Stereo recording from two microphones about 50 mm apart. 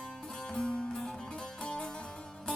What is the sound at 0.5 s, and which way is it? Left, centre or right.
Music, centre.